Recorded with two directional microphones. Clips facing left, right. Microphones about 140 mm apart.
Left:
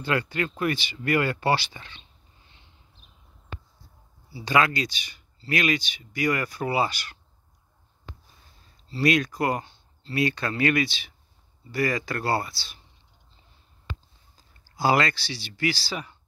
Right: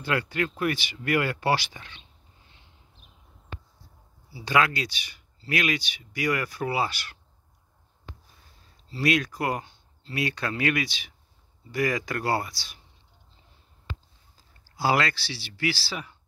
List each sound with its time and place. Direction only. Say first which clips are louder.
0.0 s speech: left 1 dB; 10° right (ahead or behind)
4.3 s speech: left 1 dB; 10° right (ahead or behind)
8.9 s speech: left 2 dB; 5° right (ahead or behind)
14.3 s speech: left 2 dB; 5° right (ahead or behind)